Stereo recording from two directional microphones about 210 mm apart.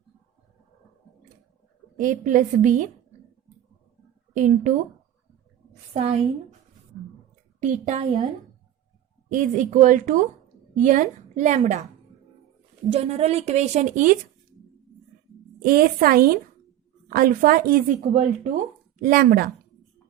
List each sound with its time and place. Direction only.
2.0 s speech: 40° right (ahead or behind)
4.4 s speech: 35° right (ahead or behind)
5.9 s a woman's voice: 30° right (ahead or behind)
7.6 s speech: 35° right (ahead or behind)
9.3 s speech: 35° right (ahead or behind)
12.9 s speech: 30° right (ahead or behind)
15.6 s a woman's voice: 45° right (ahead or behind)
18.1 s a woman's voice: 35° right (ahead or behind)